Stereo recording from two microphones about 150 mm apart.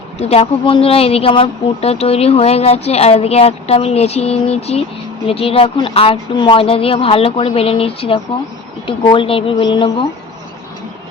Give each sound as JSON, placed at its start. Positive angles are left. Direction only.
{"t": 0.2, "sound": "speech", "side_deg": 40}